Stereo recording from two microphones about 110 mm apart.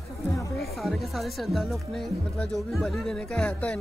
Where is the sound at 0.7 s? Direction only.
Centre (ahead or behind).